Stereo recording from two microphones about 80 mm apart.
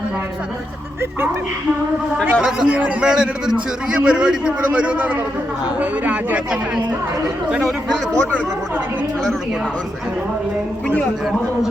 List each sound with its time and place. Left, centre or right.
2.4 s a man's voice: centre